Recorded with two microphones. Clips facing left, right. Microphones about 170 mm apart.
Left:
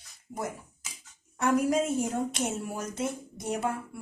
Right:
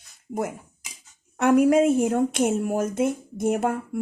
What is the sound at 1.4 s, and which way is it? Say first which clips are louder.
Speech: right 8 dB; 65° right (ahead or behind).